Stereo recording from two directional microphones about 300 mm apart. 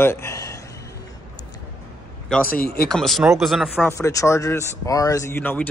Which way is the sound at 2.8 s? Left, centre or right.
Centre.